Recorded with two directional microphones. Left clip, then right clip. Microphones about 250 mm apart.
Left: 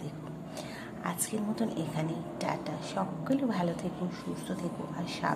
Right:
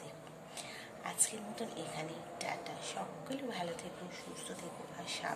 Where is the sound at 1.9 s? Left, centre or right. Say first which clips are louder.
Left 7 dB; centre.